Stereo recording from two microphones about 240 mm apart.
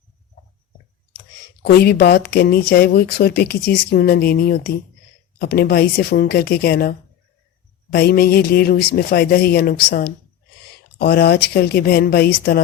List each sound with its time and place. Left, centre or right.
1.6 s speech: left
7.9 s speech: left